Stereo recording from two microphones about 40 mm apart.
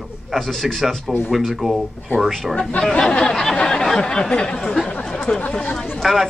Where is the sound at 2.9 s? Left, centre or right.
Centre.